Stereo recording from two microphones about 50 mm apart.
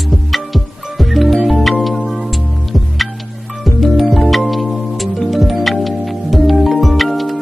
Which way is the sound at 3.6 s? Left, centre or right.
Centre.